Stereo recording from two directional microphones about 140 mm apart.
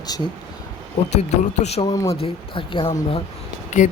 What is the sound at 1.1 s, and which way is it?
Speech, 50° left (ahead or behind).